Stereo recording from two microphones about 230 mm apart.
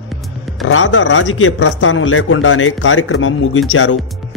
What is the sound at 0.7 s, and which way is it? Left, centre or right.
Speech, left.